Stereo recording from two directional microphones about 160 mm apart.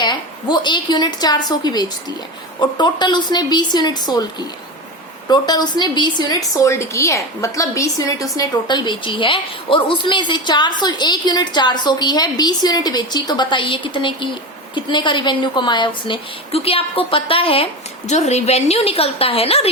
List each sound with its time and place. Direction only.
0.0 s a woman's voice: 25° left (ahead or behind)
5.3 s a woman's voice: 25° left (ahead or behind)